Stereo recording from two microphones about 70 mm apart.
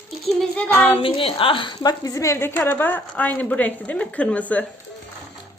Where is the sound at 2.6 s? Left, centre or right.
Left.